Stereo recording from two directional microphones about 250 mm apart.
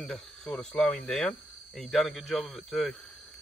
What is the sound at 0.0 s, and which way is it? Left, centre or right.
Speech, centre.